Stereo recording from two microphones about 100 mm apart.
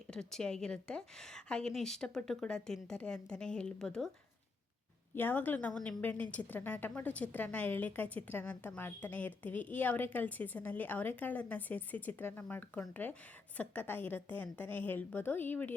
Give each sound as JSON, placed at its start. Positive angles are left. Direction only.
{"t": 0.1, "sound": "a woman's voice", "side_deg": 5}
{"t": 5.1, "sound": "a woman's voice", "side_deg": 20}